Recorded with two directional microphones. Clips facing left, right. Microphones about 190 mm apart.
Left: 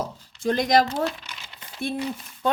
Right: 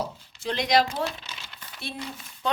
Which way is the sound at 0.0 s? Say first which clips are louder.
Left 5 dB; 50° left (ahead or behind).